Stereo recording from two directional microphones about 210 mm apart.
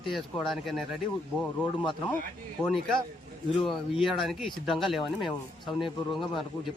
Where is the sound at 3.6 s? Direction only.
Centre (ahead or behind).